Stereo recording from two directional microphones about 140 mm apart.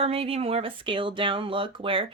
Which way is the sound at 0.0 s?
45° right (ahead or behind).